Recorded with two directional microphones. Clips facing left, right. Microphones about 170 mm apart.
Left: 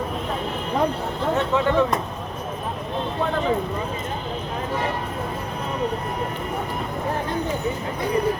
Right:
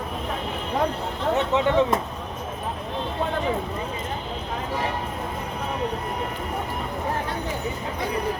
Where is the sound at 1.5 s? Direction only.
20° right (ahead or behind).